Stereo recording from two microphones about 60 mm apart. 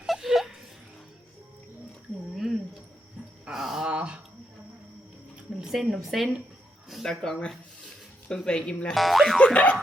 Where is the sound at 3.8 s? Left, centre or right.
Centre.